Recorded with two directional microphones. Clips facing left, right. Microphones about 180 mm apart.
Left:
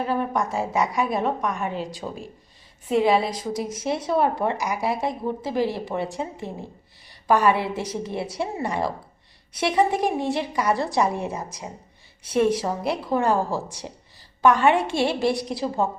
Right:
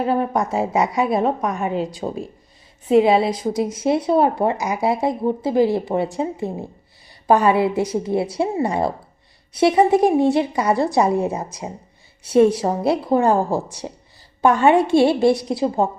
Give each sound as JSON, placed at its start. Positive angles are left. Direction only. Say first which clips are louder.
{"t": 0.0, "sound": "a woman's voice", "louder": "right 4 dB", "side_deg": -30}
{"t": 7.3, "sound": "a woman's voice", "louder": "right 4 dB", "side_deg": -25}